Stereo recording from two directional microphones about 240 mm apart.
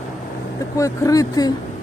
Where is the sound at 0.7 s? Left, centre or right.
Centre.